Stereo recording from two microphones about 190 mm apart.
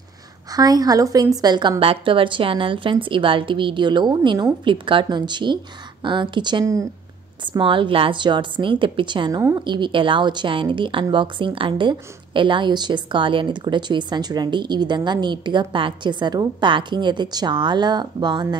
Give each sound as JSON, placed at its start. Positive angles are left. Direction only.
{"t": 0.5, "sound": "a woman's voice", "side_deg": -20}